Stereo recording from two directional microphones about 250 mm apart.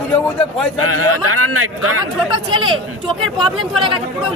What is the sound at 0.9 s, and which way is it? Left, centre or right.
A man's voice, right.